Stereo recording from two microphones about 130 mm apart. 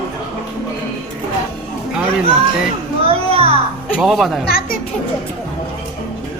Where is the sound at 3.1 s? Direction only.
50° right (ahead or behind).